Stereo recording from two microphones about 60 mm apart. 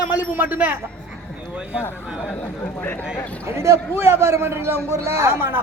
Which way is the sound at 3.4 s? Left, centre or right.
Right.